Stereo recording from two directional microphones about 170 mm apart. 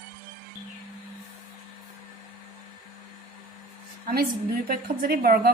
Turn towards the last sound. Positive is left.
turn(degrees=-60)  # may be behind; listen again after turning